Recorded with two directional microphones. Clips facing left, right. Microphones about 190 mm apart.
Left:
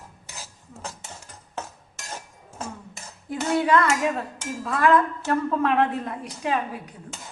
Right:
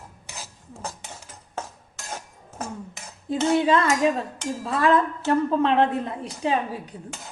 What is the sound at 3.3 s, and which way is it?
A woman's voice, 25° right (ahead or behind).